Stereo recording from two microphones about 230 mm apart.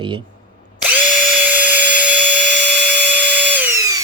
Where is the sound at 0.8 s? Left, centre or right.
Centre.